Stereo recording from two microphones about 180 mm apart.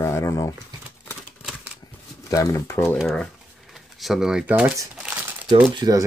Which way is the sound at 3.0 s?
Centre (ahead or behind).